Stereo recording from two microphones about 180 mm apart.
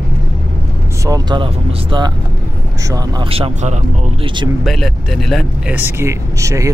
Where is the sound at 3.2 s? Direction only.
30° right (ahead or behind).